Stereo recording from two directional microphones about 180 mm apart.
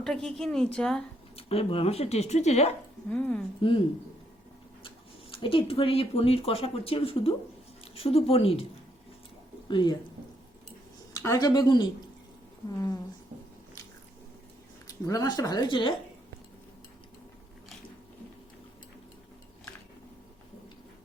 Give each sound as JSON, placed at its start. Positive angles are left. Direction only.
{"t": 0.0, "sound": "a woman's voice", "side_deg": 5}
{"t": 1.4, "sound": "speech", "side_deg": 30}
{"t": 3.1, "sound": "a woman's voice", "side_deg": 5}
{"t": 5.3, "sound": "speech", "side_deg": 30}
{"t": 9.6, "sound": "speech", "side_deg": 25}
{"t": 11.1, "sound": "speech", "side_deg": 15}
{"t": 15.0, "sound": "speech", "side_deg": 20}